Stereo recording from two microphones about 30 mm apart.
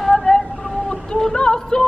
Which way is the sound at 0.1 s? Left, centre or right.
Centre.